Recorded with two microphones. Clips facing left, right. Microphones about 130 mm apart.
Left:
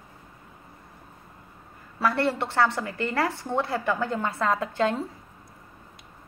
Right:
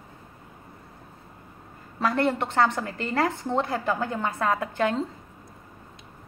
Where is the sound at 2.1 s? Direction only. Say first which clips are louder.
Right 3 dB; 15° right (ahead or behind).